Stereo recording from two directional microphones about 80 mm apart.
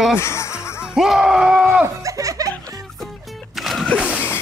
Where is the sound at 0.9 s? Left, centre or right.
Centre.